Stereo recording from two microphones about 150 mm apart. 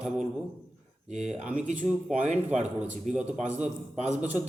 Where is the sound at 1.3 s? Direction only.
5° right (ahead or behind).